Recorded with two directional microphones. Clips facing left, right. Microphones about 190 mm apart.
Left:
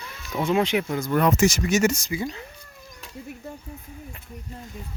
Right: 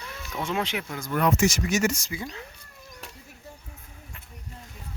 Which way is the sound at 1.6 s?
25° left (ahead or behind).